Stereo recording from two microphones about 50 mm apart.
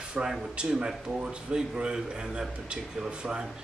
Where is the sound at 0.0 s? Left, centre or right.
Centre.